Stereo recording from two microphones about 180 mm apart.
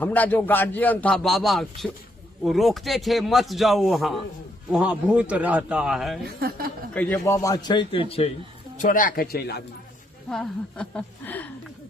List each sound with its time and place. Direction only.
0.0 s a man's voice: 10° left (ahead or behind)
6.2 s speech: 60° right (ahead or behind)
6.9 s a man's voice: 10° left (ahead or behind); by 8.3 s 30° left (ahead or behind)
8.8 s speech: 50° left (ahead or behind)
10.2 s a man's voice: 5° left (ahead or behind)